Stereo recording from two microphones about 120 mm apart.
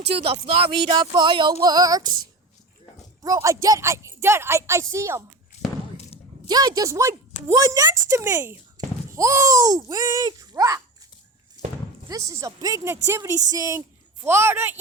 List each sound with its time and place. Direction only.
0.1 s speech: 50° right (ahead or behind)
1.1 s speech: 40° right (ahead or behind); by 5.2 s 25° right (ahead or behind)
6.5 s speech: 35° right (ahead or behind)
8.8 s a sound: 35° right (ahead or behind)
9.1 s speech: 25° right (ahead or behind)
12.0 s a woman's voice: 30° right (ahead or behind)